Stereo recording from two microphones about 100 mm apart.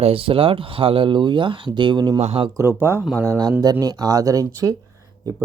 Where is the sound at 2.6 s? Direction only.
25° right (ahead or behind).